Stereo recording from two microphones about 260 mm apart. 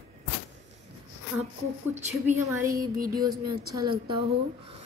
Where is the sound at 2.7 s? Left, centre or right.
Right.